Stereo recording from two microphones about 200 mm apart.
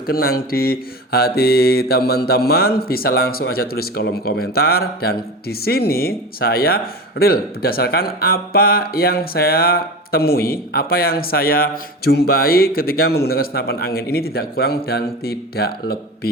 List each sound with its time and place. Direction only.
0.1 s mantra: 50° left (ahead or behind)